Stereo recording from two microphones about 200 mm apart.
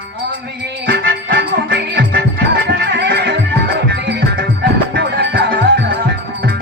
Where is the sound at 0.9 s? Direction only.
55° right (ahead or behind).